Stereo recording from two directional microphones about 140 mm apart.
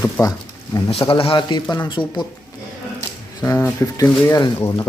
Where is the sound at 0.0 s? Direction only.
25° left (ahead or behind).